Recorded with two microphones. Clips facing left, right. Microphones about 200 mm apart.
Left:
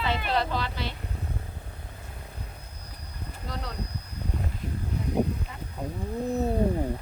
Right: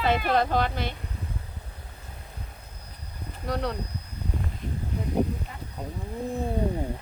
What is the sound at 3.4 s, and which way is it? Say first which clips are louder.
Speech: right 9 dB; 65° right (ahead or behind).